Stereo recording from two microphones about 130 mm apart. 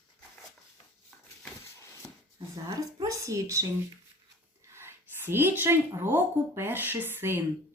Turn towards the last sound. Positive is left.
turn(degrees=-15)  # may be behind; listen again after turning